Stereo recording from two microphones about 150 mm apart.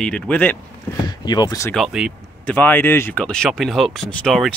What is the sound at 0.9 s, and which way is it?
Speech, 25° left (ahead or behind).